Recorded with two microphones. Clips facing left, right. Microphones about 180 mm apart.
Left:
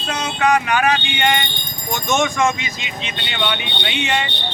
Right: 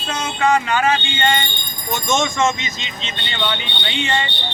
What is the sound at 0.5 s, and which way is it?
Speech, 15° left (ahead or behind).